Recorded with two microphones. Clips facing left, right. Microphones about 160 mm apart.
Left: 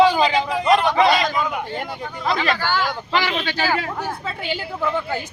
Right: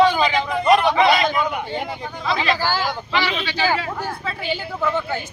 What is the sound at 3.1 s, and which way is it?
Speech, 50° left (ahead or behind).